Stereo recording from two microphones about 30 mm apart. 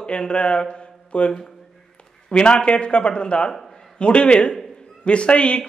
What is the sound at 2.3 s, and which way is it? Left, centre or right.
Speech, left.